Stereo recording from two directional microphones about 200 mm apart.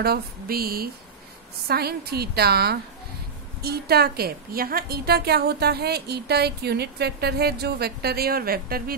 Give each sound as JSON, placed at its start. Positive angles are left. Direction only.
{"t": 0.0, "sound": "a woman's voice", "side_deg": -50}